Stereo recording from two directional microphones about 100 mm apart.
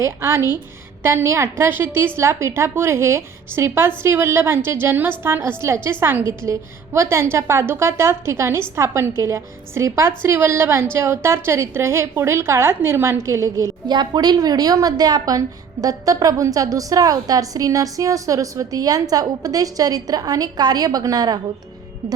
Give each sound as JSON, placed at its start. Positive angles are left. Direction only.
{"t": 0.0, "sound": "a woman's voice", "side_deg": -25}
{"t": 13.8, "sound": "a woman's voice", "side_deg": -45}